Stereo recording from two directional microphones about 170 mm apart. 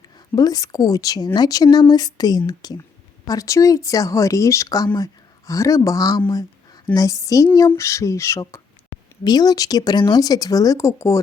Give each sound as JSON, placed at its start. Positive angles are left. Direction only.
{"t": 0.3, "sound": "speech", "side_deg": 20}